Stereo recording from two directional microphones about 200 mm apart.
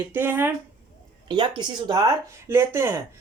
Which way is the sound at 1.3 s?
20° right (ahead or behind).